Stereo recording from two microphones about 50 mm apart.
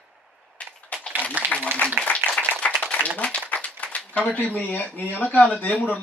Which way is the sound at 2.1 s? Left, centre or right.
Left.